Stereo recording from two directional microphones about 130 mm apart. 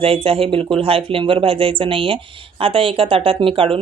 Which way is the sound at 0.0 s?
45° right (ahead or behind).